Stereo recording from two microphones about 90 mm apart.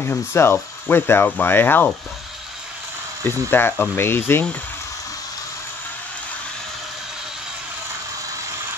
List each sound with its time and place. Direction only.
0.0 s speech: 25° left (ahead or behind)
3.3 s speech: 25° left (ahead or behind)